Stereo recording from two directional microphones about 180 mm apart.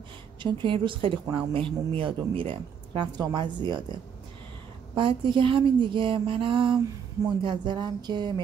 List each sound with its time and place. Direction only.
0.4 s speech: 25° right (ahead or behind)
4.9 s speech: 25° right (ahead or behind)